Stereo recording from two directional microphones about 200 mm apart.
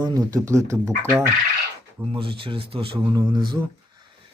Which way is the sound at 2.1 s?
25° right (ahead or behind).